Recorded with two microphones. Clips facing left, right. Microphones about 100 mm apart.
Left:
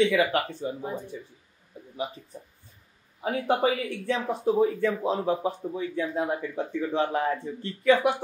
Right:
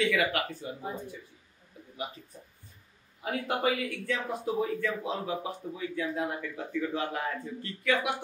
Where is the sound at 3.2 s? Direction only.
30° left (ahead or behind).